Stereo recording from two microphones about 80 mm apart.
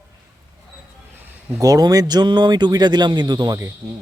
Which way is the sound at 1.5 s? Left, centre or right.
Right.